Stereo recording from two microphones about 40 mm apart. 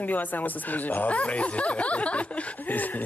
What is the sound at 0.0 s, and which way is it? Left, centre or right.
Speech, left.